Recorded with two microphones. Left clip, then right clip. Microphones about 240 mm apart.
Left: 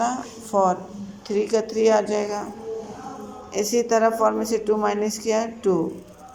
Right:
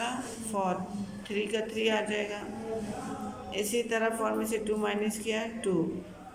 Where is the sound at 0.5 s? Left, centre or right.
Centre.